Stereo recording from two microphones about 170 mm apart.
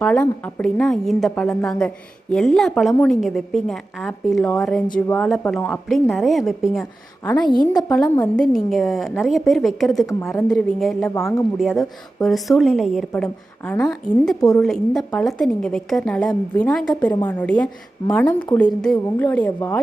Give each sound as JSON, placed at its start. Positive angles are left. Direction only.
{"t": 0.0, "sound": "a woman's voice", "side_deg": 10}
{"t": 7.3, "sound": "a woman's voice", "side_deg": 25}
{"t": 8.2, "sound": "a woman's voice", "side_deg": 5}
{"t": 11.1, "sound": "a woman's voice", "side_deg": 20}
{"t": 11.5, "sound": "a woman's voice", "side_deg": 0}